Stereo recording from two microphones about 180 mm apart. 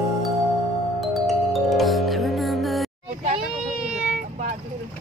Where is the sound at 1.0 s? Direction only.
Centre (ahead or behind).